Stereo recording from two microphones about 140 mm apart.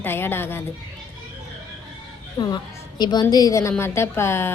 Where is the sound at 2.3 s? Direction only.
30° left (ahead or behind).